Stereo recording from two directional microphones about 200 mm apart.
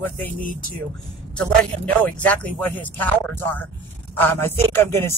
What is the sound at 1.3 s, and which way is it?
Speech, 5° left (ahead or behind).